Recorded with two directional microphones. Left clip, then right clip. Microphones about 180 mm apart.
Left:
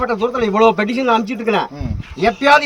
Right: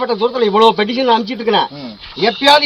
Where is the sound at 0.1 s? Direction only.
30° left (ahead or behind).